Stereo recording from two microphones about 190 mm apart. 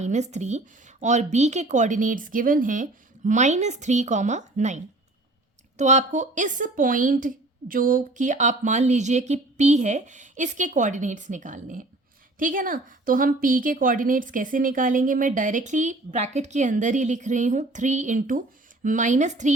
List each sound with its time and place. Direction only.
0.0 s a woman's voice: 35° right (ahead or behind)